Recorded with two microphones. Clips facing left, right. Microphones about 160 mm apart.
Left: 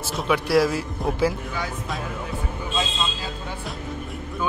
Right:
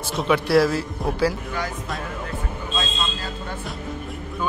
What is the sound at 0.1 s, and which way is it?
Speech, centre (ahead or behind).